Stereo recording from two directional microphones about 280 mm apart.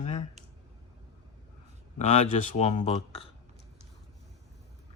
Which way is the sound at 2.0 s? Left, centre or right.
Left.